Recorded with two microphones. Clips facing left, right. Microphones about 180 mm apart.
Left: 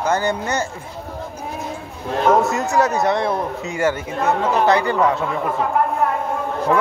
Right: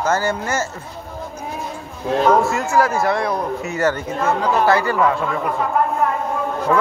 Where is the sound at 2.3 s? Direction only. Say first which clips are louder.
Even; 20° left (ahead or behind).